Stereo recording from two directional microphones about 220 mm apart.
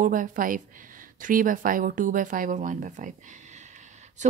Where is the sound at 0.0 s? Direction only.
35° right (ahead or behind).